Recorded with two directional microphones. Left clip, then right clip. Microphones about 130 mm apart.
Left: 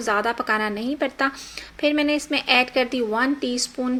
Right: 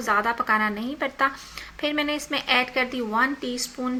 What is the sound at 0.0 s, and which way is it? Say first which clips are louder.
A woman's voice: even; 35° left (ahead or behind).